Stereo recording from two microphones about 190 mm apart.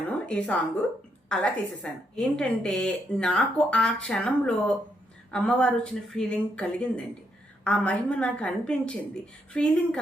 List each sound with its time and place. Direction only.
0.1 s a woman's voice: 5° left (ahead or behind)